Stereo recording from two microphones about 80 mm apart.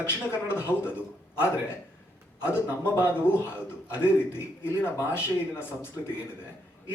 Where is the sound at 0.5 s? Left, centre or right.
Left.